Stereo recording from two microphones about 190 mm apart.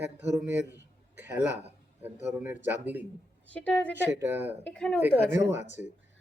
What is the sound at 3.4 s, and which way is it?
Speech, 5° left (ahead or behind).